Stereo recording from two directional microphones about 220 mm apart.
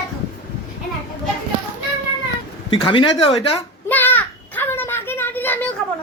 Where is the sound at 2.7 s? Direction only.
20° left (ahead or behind).